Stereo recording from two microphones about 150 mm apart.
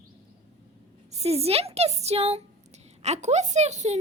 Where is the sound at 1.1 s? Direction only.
45° right (ahead or behind).